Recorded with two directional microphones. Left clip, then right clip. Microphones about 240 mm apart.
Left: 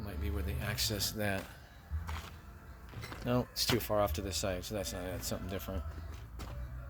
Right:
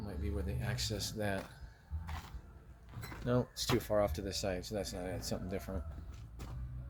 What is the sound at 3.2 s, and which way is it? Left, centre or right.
Speech, centre.